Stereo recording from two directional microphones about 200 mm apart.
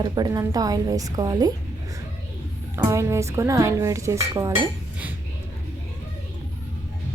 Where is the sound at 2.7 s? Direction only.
15° right (ahead or behind).